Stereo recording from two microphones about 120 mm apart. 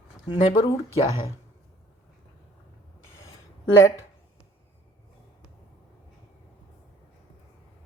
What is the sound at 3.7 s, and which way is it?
Speech, 25° left (ahead or behind).